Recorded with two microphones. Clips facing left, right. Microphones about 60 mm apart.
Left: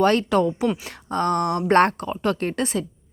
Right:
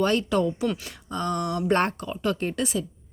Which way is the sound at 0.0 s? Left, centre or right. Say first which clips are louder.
Left 4 dB; left.